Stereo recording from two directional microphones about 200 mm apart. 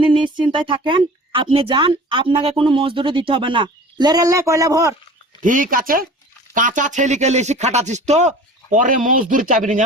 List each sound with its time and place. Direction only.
0.3 s speech: 25° right (ahead or behind)
5.4 s speech: 40° right (ahead or behind)